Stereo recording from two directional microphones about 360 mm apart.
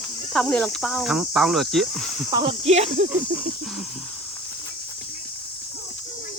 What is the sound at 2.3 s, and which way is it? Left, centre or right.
Speech, centre.